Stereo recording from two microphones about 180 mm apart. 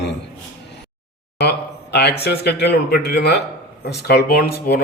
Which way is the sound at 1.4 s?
65° left (ahead or behind).